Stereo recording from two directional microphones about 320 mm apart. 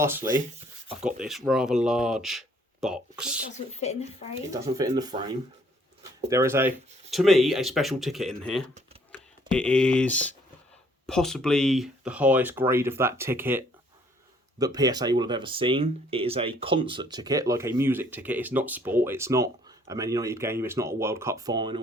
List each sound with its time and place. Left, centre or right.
1.0 s speech: centre
3.8 s speech: centre
4.5 s speech: centre
6.2 s speech: centre